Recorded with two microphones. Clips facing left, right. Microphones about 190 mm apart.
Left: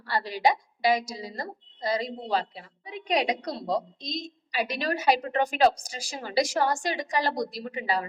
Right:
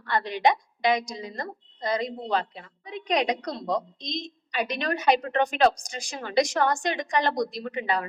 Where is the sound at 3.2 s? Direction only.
25° left (ahead or behind).